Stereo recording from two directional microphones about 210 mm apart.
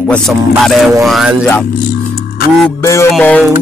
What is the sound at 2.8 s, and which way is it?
Speech, 15° left (ahead or behind).